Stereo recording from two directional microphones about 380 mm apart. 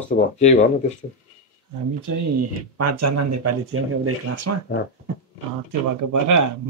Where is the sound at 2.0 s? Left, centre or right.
Right.